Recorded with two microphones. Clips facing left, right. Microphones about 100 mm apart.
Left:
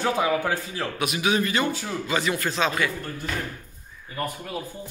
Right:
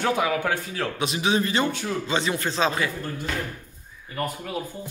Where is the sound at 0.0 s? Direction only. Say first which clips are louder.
Even; centre (ahead or behind).